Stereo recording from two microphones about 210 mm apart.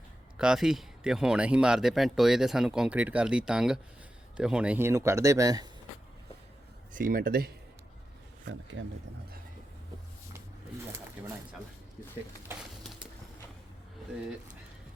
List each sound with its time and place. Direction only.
0.3 s speech: 5° right (ahead or behind)
6.9 s speech: 40° right (ahead or behind)